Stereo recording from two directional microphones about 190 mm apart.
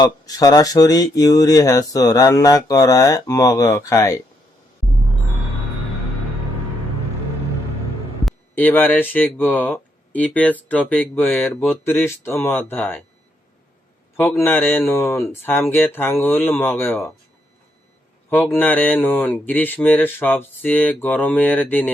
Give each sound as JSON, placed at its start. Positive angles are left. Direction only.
{"t": 0.0, "sound": "speech", "side_deg": 20}
{"t": 8.2, "sound": "speech", "side_deg": 5}
{"t": 14.2, "sound": "speech", "side_deg": 10}
{"t": 18.5, "sound": "speech", "side_deg": 10}